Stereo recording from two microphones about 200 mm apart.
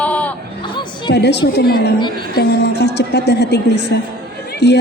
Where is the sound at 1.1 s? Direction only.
55° left (ahead or behind).